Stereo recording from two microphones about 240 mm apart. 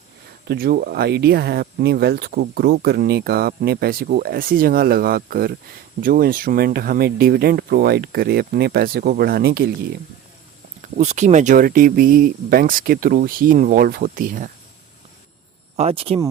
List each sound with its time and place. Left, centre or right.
0.4 s speech: right
10.9 s speech: right
15.7 s speech: right